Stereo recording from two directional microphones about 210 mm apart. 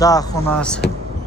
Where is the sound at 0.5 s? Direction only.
5° left (ahead or behind).